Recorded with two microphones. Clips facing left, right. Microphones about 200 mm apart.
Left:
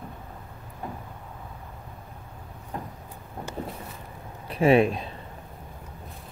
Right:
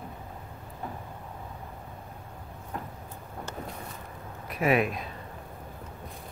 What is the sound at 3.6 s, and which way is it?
Vehicle, 30° left (ahead or behind).